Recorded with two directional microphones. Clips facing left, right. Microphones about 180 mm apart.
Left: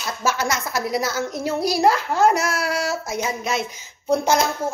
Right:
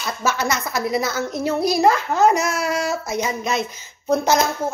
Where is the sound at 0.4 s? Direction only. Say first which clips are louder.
Right 1 dB; 10° left (ahead or behind).